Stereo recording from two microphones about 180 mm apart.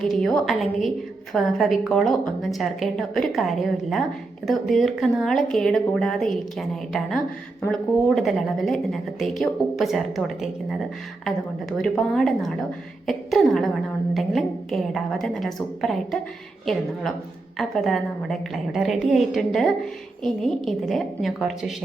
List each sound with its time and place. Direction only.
0.0 s a woman's voice: 5° left (ahead or behind)
11.8 s a woman's voice: 5° left (ahead or behind)